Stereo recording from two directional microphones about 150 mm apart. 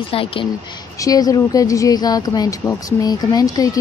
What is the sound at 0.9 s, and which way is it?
Speech, 25° left (ahead or behind).